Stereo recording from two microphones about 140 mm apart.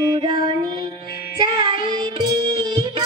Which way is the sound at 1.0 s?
90° left.